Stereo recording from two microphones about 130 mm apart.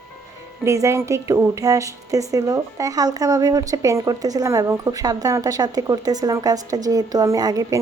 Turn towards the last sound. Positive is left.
turn(degrees=-30)  # may be behind; listen again after turning